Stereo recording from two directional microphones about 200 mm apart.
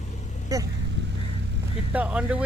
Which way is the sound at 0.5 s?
15° right (ahead or behind).